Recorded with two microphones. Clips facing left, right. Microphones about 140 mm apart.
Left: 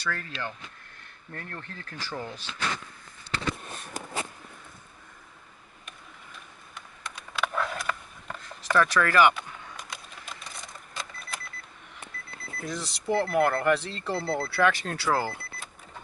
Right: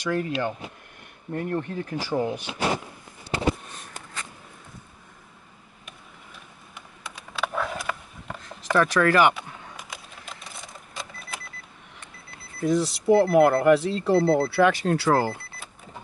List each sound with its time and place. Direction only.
0.0 s speech: 15° right (ahead or behind)
6.7 s a sound: 5° right (ahead or behind)
9.3 s a sound: 5° right (ahead or behind)
12.6 s speech: 5° right (ahead or behind)
14.1 s speech: 35° right (ahead or behind)
14.5 s speech: 5° right (ahead or behind)